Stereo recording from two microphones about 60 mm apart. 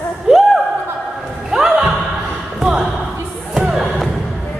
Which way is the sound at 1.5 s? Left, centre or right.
Centre.